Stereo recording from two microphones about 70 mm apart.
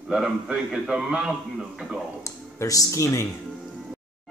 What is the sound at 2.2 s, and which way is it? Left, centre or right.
Speech, left.